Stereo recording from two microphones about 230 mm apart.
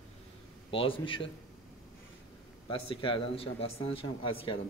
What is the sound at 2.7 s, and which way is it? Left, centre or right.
Speech, left.